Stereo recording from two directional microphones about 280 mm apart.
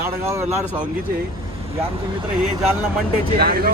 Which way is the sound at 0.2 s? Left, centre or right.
Centre.